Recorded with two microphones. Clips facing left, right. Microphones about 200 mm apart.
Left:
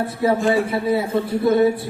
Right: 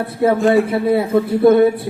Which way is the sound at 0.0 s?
60° right (ahead or behind).